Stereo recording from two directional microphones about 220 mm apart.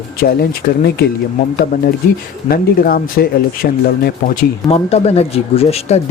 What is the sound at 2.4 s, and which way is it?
Speech, 45° left (ahead or behind).